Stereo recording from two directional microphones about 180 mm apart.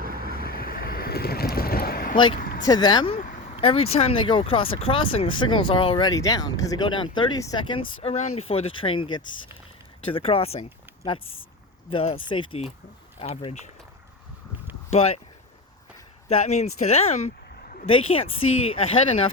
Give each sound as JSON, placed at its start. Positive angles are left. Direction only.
{"t": 0.0, "sound": "vehicle", "side_deg": -55}
{"t": 0.4, "sound": "boat", "side_deg": 55}
{"t": 2.1, "sound": "speech", "side_deg": 25}
{"t": 2.4, "sound": "vehicle", "side_deg": 50}
{"t": 2.6, "sound": "speech", "side_deg": 25}
{"t": 3.2, "sound": "a sound", "side_deg": 45}
{"t": 3.5, "sound": "speech", "side_deg": 30}
{"t": 8.0, "sound": "speech", "side_deg": 35}
{"t": 14.8, "sound": "a sound", "side_deg": 35}
{"t": 16.3, "sound": "speech", "side_deg": 35}